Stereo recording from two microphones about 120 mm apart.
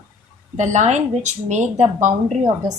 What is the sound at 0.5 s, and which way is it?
A woman's voice, 90° right.